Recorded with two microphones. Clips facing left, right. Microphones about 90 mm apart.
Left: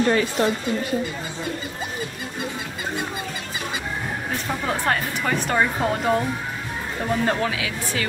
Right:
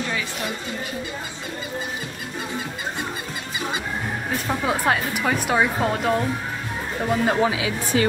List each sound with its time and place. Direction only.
0.0 s speech: 45° left (ahead or behind)
4.5 s speech: 5° right (ahead or behind); by 8.1 s 25° right (ahead or behind)